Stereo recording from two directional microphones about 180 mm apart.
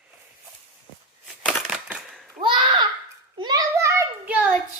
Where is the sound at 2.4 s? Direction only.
25° right (ahead or behind).